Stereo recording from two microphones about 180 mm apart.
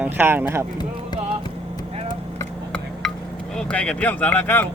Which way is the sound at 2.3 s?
10° left (ahead or behind).